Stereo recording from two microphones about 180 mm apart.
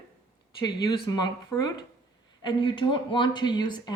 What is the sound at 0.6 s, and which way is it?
Speech, 20° left (ahead or behind).